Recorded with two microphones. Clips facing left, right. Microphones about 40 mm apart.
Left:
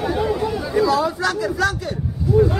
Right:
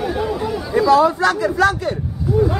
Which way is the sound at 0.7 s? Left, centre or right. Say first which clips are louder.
Right 6 dB; centre.